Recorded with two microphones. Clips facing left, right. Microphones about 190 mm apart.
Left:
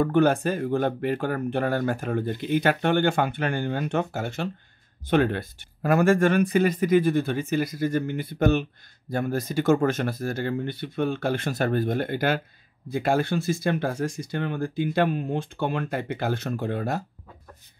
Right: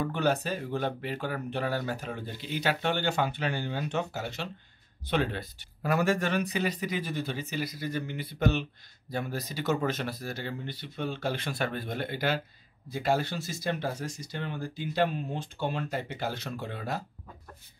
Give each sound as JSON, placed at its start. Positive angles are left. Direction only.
{"t": 0.0, "sound": "speech", "side_deg": 50}